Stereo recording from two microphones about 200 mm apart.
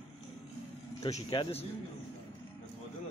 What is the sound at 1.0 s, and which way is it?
Speech, 25° left (ahead or behind).